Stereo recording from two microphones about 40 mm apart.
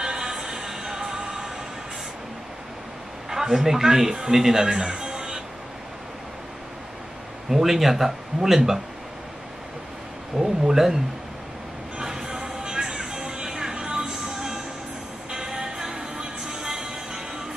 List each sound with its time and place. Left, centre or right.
0.0 s music: centre
3.3 s a man's voice: centre
4.6 s music: centre
7.4 s speech: centre
10.3 s speech: centre
12.0 s music: centre